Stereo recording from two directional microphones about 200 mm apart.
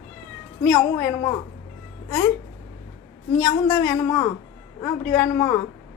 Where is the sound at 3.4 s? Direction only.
20° left (ahead or behind).